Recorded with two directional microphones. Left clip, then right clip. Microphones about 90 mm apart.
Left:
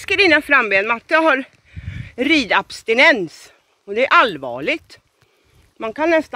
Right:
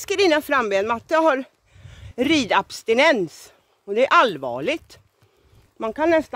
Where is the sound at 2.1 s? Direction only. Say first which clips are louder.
Left 3 dB; 45° right (ahead or behind).